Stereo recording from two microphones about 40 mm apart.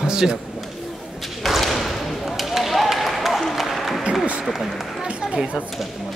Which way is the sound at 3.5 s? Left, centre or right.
Centre.